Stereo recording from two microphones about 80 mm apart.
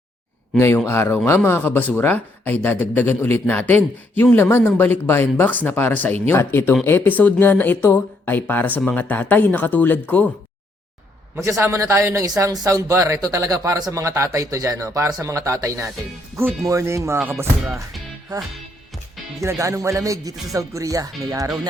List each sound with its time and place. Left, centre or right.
0.9 s speech: left
11.4 s speech: right
13.9 s speech: right
18.3 s speech: right
19.4 s speech: right